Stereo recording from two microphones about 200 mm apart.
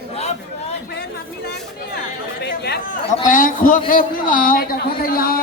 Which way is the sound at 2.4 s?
55° left (ahead or behind).